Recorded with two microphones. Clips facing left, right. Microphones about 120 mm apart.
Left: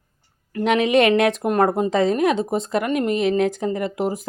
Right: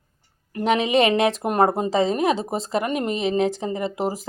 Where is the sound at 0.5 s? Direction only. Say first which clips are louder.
Left 2 dB; 35° right (ahead or behind).